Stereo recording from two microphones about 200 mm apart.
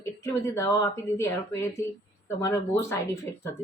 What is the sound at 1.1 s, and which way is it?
Speech, 15° left (ahead or behind).